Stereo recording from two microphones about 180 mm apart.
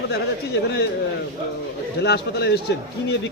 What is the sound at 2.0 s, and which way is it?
Speech, 65° left (ahead or behind).